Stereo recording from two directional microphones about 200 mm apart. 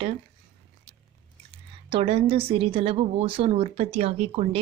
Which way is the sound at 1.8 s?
30° right (ahead or behind).